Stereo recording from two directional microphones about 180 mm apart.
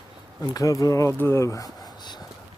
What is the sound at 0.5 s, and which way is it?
Speech, 20° left (ahead or behind).